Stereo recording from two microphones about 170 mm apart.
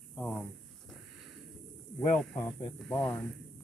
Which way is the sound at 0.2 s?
5° left (ahead or behind).